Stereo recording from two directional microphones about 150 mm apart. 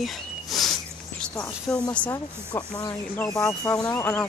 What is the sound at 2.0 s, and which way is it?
Speech, 20° left (ahead or behind).